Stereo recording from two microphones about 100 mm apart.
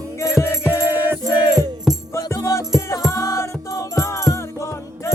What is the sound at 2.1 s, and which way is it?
Music, 30° left (ahead or behind).